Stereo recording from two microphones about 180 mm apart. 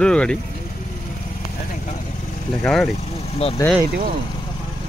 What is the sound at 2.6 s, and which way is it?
Speech, 5° left (ahead or behind).